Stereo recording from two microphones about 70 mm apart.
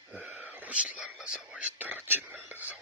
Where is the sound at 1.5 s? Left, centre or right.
Right.